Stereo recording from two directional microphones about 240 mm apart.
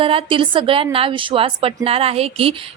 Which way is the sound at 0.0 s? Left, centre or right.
Right.